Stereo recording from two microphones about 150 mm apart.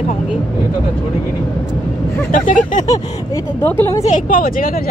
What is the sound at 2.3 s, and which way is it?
Speech, 60° left (ahead or behind).